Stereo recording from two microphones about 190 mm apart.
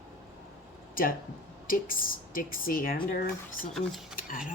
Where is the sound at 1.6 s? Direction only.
50° left (ahead or behind).